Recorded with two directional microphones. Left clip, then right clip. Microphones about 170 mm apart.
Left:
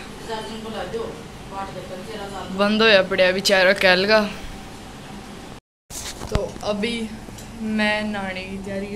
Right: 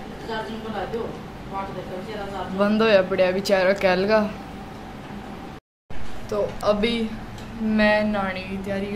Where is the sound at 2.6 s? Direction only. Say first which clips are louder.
Left 3 dB; centre (ahead or behind).